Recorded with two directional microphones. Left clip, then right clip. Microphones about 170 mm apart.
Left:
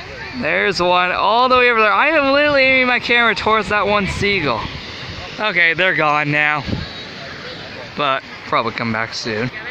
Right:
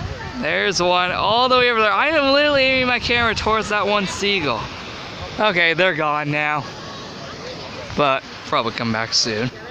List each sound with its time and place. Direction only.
0.4 s speech: centre (ahead or behind)
5.4 s speech: 20° right (ahead or behind)
5.9 s speech: 5° left (ahead or behind)
8.0 s speech: 25° right (ahead or behind)
8.5 s speech: 5° left (ahead or behind)